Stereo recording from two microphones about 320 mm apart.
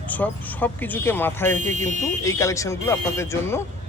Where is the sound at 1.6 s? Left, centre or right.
Right.